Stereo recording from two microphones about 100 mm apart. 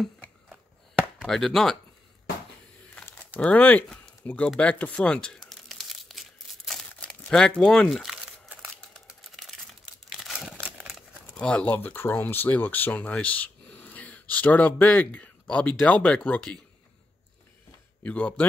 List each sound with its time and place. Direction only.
1.2 s chopping: 5° left (ahead or behind)
3.3 s speech: 15° left (ahead or behind)
4.6 s crumpling: 15° left (ahead or behind); by 10.3 s centre (ahead or behind)
10.3 s a sound: 10° right (ahead or behind)
11.3 s speech: 10° left (ahead or behind)
18.0 s speech: 15° left (ahead or behind)